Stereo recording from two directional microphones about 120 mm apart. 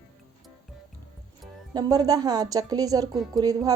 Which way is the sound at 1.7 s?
30° right (ahead or behind).